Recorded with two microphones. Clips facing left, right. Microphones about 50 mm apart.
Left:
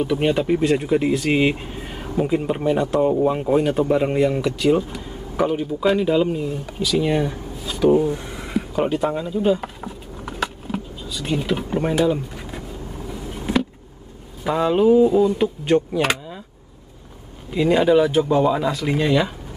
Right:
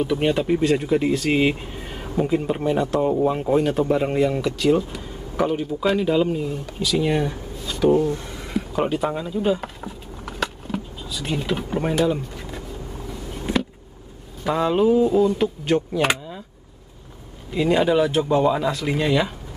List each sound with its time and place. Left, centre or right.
0.0 s speech: centre
7.9 s a sound: centre
8.5 s a sound: centre
13.5 s vehicle: centre
14.4 s speech: centre
17.5 s speech: centre